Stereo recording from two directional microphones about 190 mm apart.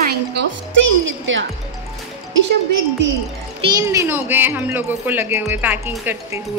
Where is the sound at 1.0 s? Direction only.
90° right.